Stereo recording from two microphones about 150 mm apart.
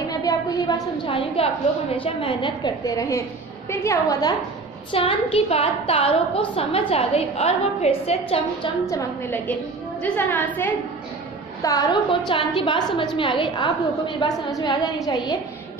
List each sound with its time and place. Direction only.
0.2 s a woman's voice: 25° left (ahead or behind)
2.8 s a woman's voice: 20° left (ahead or behind)
4.9 s a woman's voice: 40° left (ahead or behind)
8.8 s a woman's voice: 15° left (ahead or behind)
11.6 s a woman's voice: 20° left (ahead or behind)